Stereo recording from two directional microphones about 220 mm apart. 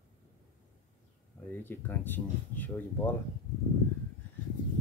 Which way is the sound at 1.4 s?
10° left (ahead or behind).